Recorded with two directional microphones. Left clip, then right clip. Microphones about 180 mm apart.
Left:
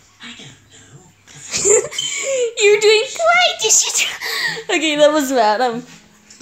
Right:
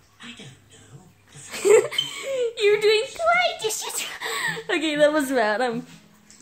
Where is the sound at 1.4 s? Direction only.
5° left (ahead or behind).